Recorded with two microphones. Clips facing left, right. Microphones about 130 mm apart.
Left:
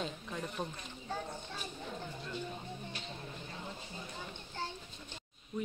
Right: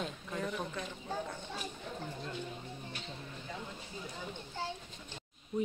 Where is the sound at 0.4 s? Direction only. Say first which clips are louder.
Right 3 dB; 90° right.